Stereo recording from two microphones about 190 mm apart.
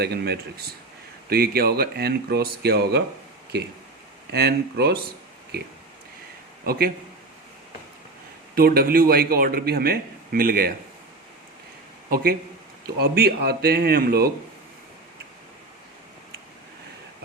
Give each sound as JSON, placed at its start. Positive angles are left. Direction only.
{"t": 0.0, "sound": "speech", "side_deg": -60}
{"t": 6.7, "sound": "speech", "side_deg": -50}
{"t": 8.5, "sound": "speech", "side_deg": -50}
{"t": 12.1, "sound": "speech", "side_deg": -55}